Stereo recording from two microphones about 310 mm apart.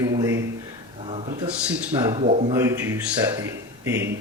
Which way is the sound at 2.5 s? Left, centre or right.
Centre.